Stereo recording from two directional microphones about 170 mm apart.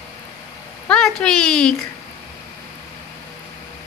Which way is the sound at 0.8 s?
5° left (ahead or behind).